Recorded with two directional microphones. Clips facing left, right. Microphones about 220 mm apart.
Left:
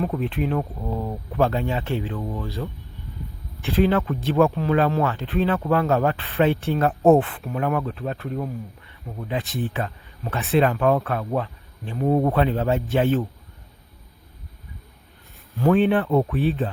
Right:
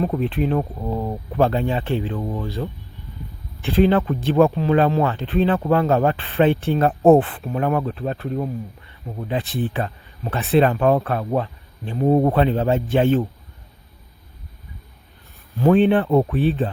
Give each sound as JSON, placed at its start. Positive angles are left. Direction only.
{"t": 0.0, "sound": "speech", "side_deg": -35}
{"t": 3.7, "sound": "speech", "side_deg": -30}
{"t": 15.7, "sound": "speech", "side_deg": -30}